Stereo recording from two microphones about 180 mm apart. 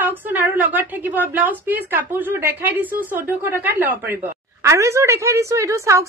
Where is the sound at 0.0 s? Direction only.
10° right (ahead or behind).